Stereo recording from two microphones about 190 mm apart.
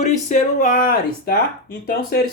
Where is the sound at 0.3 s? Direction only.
40° left (ahead or behind).